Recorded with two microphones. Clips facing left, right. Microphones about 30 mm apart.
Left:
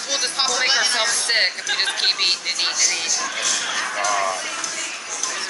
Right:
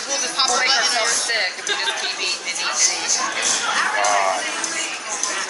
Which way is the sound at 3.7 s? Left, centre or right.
Centre.